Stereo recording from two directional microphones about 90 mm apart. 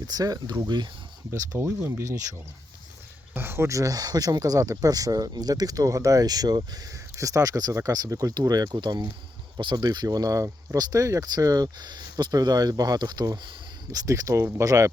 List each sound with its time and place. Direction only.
0.1 s speech: 45° right (ahead or behind)
1.3 s speech: 30° right (ahead or behind)
3.3 s speech: 25° right (ahead or behind)